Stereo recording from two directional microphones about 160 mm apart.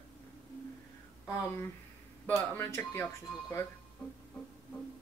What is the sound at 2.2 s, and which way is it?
Speech, 10° left (ahead or behind).